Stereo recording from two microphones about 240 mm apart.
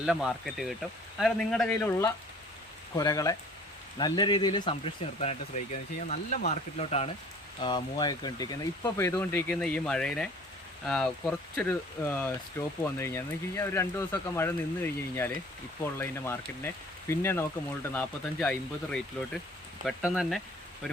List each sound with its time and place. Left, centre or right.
0.0 s speech: centre